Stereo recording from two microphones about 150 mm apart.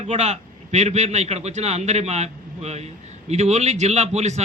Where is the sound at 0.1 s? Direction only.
45° right (ahead or behind).